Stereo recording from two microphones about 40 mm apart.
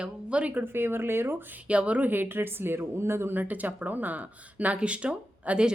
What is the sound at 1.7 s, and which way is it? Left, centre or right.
Speech, right.